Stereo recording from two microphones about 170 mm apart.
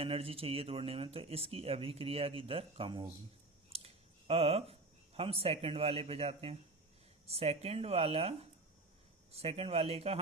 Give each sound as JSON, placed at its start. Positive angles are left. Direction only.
{"t": 0.0, "sound": "speech", "side_deg": -35}